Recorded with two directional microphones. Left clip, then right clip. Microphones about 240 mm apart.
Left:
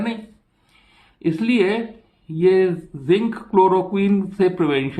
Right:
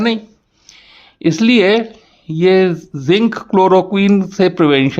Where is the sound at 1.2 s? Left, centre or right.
Right.